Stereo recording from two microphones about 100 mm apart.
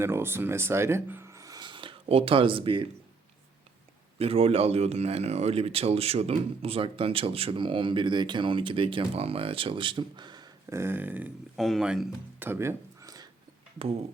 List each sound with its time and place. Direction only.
0.0 s speech: 25° right (ahead or behind)
1.6 s speech: 55° right (ahead or behind)
4.2 s speech: 85° right; by 10.5 s 45° right (ahead or behind)
10.7 s a sound: 25° right (ahead or behind)
11.5 s speech: centre (ahead or behind)
12.4 s a sound: 25° right (ahead or behind)